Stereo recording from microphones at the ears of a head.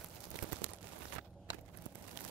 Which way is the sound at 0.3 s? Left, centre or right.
Right.